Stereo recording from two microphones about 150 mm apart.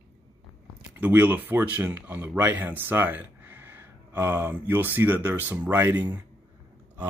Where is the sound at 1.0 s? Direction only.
10° right (ahead or behind).